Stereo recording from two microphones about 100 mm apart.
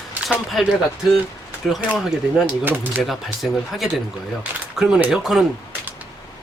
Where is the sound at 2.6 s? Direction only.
20° right (ahead or behind).